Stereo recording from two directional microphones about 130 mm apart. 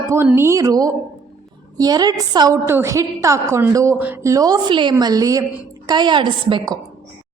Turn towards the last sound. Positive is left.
turn(degrees=-35)  # may be behind; listen again after turning